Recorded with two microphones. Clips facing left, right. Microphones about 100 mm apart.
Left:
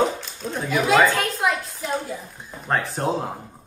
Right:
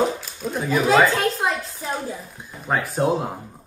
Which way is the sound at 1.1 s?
30° right (ahead or behind).